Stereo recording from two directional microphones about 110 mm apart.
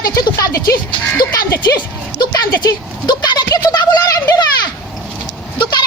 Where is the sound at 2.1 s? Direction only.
35° left (ahead or behind).